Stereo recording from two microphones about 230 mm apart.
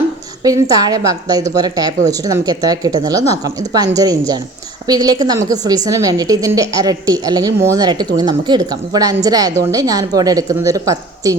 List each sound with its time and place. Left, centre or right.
0.4 s a woman's voice: centre